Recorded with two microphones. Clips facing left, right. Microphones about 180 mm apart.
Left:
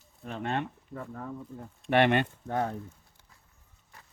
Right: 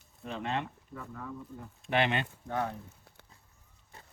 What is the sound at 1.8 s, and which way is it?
Speech, 55° left (ahead or behind).